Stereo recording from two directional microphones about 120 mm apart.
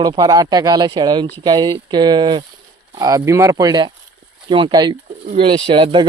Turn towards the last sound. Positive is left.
turn(degrees=-45)  # may be behind; listen again after turning